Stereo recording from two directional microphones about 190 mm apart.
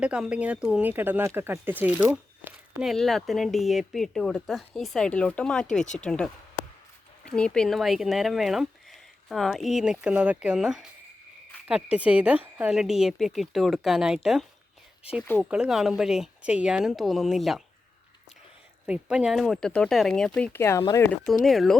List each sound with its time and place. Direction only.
0.0 s speech: 5° right (ahead or behind)
18.9 s speech: 5° right (ahead or behind)